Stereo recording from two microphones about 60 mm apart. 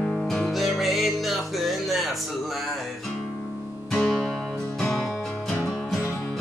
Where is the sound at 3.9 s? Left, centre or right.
Centre.